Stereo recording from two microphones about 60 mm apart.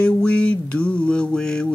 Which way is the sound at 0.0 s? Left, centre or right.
Centre.